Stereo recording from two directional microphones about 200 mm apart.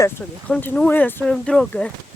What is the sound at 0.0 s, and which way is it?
Speech, 10° left (ahead or behind).